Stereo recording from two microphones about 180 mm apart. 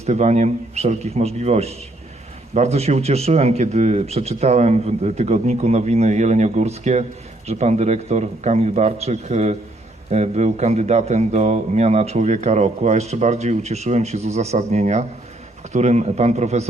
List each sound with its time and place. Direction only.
0.0 s a man's voice: 40° right (ahead or behind)